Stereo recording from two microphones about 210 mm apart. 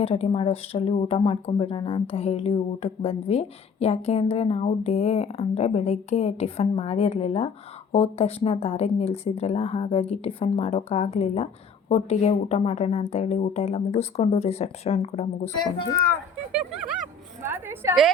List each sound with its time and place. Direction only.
0.0 s speech: 30° left (ahead or behind)
16.5 s a woman's voice: 5° right (ahead or behind)